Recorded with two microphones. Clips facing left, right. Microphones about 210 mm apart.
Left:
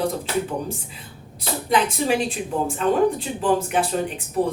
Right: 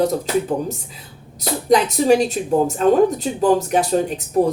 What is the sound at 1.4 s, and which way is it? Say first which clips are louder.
A woman's voice: right 5 dB; 40° right (ahead or behind).